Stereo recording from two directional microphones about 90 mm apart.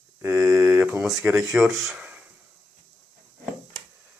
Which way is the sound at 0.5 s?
15° right (ahead or behind).